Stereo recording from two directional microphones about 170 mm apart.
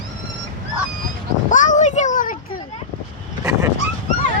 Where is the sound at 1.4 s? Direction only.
50° left (ahead or behind).